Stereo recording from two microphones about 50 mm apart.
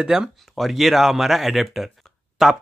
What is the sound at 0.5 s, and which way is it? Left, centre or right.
Speech, centre.